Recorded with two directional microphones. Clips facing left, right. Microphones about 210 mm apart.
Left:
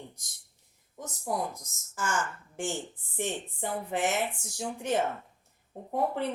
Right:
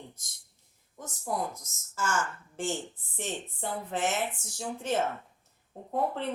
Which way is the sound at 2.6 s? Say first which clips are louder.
Right 1 dB; 15° left (ahead or behind).